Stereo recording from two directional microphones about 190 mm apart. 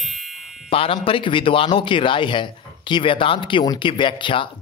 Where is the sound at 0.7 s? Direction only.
30° left (ahead or behind).